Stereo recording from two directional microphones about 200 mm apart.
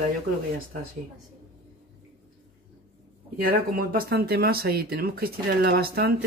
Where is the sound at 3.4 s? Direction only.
50° right (ahead or behind).